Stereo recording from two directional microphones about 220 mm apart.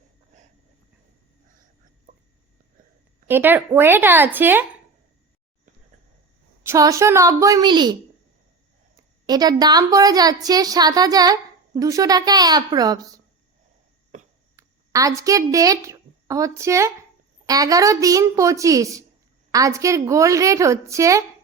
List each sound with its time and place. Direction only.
2.1 s a sound: 35° right (ahead or behind)
3.2 s a woman's voice: 10° right (ahead or behind)
6.7 s a woman's voice: 15° right (ahead or behind)
9.2 s a woman's voice: 20° right (ahead or behind)
14.5 s a woman's voice: 15° right (ahead or behind)